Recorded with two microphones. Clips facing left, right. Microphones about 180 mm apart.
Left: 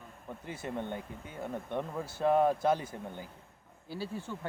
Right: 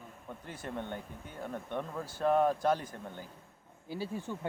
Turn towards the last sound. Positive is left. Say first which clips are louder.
# right 1 dB
turn(degrees=-15)  # may be behind; listen again after turning